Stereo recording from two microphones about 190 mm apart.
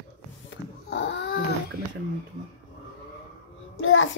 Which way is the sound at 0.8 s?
65° left (ahead or behind).